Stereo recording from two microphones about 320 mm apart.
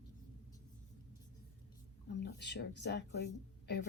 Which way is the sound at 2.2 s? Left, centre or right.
Left.